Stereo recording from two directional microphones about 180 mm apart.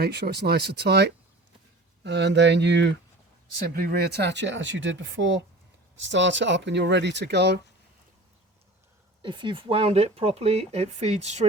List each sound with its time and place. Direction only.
0.0 s speech: 65° right (ahead or behind)
3.8 s speech: 60° right (ahead or behind)
9.2 s speech: 25° right (ahead or behind)